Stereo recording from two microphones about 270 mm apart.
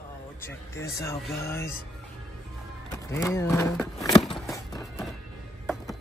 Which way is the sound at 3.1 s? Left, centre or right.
Centre.